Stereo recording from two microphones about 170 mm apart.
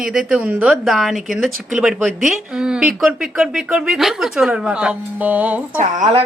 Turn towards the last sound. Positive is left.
turn(degrees=-40)  # may be behind; listen again after turning